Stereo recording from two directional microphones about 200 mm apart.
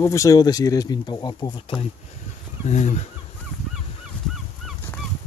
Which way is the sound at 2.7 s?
35° left (ahead or behind).